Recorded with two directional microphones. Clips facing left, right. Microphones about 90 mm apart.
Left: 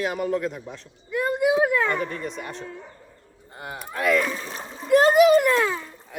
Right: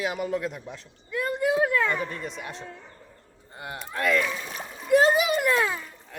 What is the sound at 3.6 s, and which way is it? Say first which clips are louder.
Speech: left 2 dB; centre (ahead or behind).